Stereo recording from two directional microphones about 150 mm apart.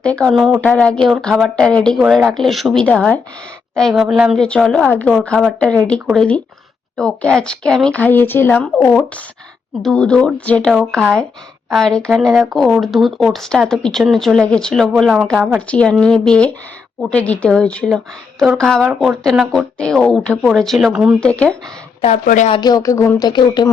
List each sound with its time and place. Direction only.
0.0 s speech: 5° left (ahead or behind)
4.4 s a woman's voice: 10° left (ahead or behind)
22.0 s speech: 60° left (ahead or behind)
22.6 s speech: 25° left (ahead or behind)